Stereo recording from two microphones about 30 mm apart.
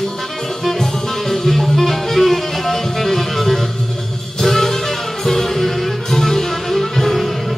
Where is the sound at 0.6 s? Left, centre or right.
Centre.